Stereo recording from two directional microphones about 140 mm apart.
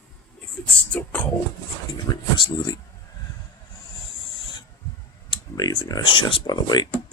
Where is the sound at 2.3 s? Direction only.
30° left (ahead or behind).